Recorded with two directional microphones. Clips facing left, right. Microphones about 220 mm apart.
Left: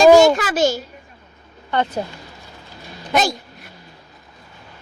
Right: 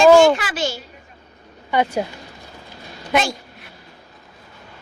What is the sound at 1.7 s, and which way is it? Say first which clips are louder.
Speech: right 2 dB; 10° right (ahead or behind).